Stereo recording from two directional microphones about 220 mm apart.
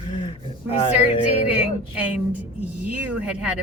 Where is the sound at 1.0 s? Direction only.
5° right (ahead or behind).